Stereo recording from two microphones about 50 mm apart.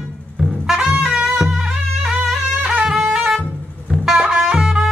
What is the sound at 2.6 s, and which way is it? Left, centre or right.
Music, right.